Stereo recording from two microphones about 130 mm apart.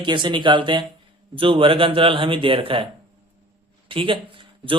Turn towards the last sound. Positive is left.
turn(degrees=-40)  # may be behind; listen again after turning